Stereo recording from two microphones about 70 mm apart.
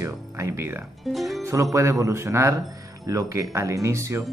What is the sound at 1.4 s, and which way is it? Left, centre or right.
Speech, right.